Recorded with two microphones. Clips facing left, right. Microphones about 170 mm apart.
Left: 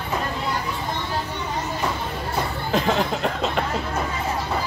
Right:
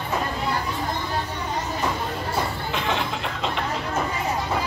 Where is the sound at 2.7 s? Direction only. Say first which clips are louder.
Left 5 dB; 40° left (ahead or behind).